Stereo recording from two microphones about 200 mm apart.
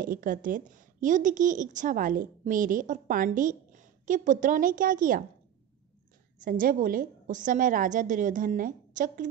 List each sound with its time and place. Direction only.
0.0 s a woman's voice: 45° right (ahead or behind)
6.4 s a woman's voice: 45° right (ahead or behind)